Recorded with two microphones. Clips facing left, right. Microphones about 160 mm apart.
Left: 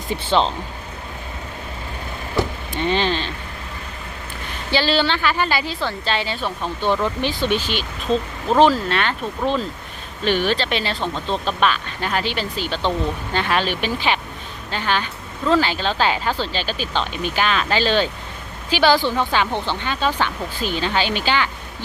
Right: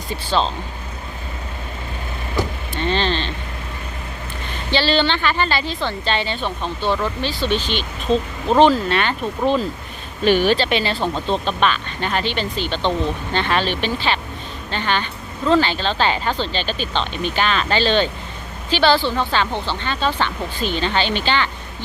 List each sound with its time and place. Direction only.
0.1 s speech: 20° left (ahead or behind)
2.7 s speech: 15° left (ahead or behind)
4.7 s speech: 5° left (ahead or behind)